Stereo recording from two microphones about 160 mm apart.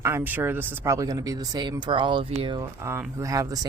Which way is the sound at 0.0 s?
15° right (ahead or behind).